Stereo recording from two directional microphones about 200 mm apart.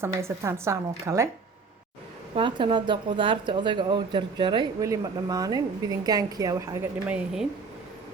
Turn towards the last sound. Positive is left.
turn(degrees=-5)  # may be behind; listen again after turning